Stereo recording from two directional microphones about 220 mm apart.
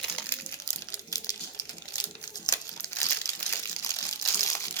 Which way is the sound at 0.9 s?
15° left (ahead or behind).